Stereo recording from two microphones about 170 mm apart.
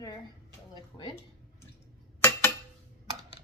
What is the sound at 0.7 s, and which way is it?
Speech, 25° left (ahead or behind).